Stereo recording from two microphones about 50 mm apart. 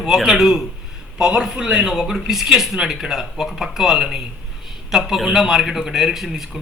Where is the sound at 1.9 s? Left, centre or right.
Centre.